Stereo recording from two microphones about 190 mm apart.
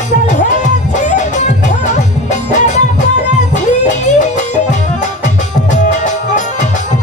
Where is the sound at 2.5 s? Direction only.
40° left (ahead or behind).